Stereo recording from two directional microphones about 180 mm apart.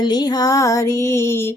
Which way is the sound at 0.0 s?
25° left (ahead or behind).